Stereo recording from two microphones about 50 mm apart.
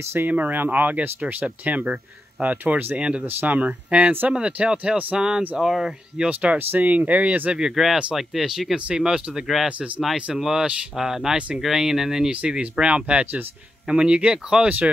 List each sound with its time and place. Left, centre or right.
0.0 s speech: right
0.3 s speech: right
3.3 s speech: right; by 5.9 s centre
6.1 s speech: right
7.5 s speech: centre
10.3 s speech: centre
11.3 s speech: right
11.6 s speech: centre
12.3 s speech: right